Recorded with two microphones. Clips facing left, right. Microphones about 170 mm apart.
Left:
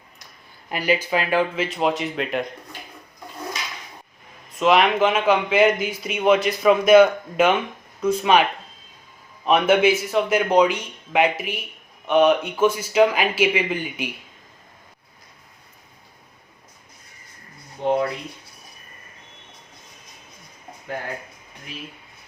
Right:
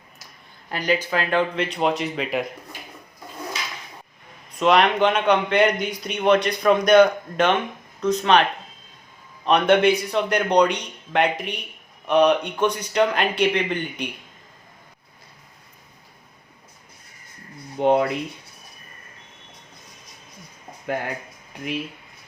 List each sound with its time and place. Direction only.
0.7 s speech: 10° left (ahead or behind)
4.5 s speech: centre (ahead or behind)
17.7 s speech: 70° right (ahead or behind)